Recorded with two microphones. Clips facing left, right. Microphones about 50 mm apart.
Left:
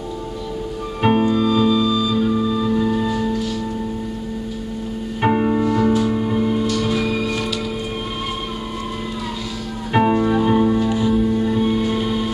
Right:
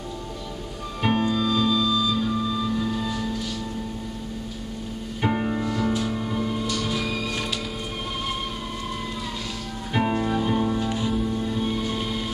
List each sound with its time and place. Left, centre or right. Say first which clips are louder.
1.0 s music: left 6 dB; centre
5.2 s music: left 8 dB; left
6.9 s music: left 7 dB; centre
9.9 s music: left 7 dB; left